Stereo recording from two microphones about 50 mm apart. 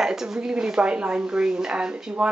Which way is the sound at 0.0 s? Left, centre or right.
Centre.